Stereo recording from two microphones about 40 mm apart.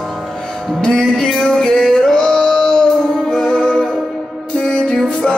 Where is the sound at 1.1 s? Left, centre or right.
Centre.